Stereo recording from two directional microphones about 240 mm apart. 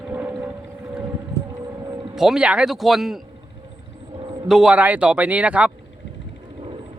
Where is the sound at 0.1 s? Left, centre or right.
Centre.